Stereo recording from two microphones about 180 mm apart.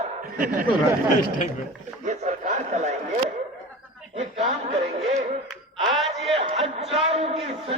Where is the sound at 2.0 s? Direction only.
40° right (ahead or behind).